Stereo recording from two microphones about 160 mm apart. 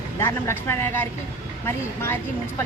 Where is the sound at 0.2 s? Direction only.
15° left (ahead or behind).